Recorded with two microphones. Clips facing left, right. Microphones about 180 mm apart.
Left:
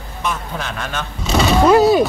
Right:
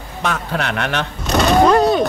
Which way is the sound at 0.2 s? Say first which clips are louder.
Right 3 dB; 75° right (ahead or behind).